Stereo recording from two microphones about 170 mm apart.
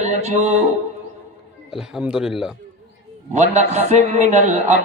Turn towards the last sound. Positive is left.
turn(degrees=-45)  # may be behind; listen again after turning